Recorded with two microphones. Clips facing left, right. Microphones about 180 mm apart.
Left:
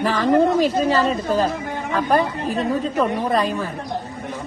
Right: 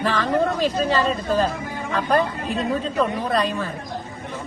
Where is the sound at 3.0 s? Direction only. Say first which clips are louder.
Left 1 dB; 15° left (ahead or behind).